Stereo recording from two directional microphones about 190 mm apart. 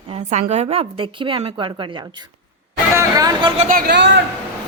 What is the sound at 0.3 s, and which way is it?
A woman's voice, 35° right (ahead or behind).